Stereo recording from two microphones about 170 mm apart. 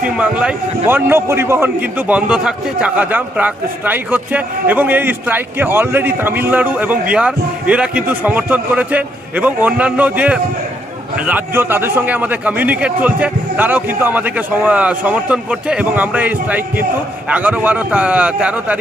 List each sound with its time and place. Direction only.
0.0 s a man's voice: 5° right (ahead or behind)